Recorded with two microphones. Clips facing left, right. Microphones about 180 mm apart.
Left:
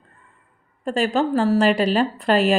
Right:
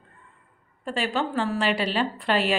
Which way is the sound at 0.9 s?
45° left (ahead or behind).